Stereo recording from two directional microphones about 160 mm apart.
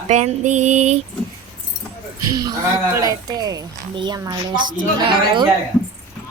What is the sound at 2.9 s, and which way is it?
Speech, 20° right (ahead or behind).